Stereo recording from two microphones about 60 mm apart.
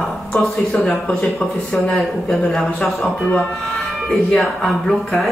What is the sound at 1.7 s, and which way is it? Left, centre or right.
Speech, left.